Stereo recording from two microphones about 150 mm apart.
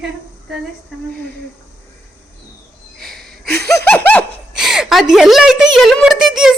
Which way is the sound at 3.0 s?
5° left (ahead or behind).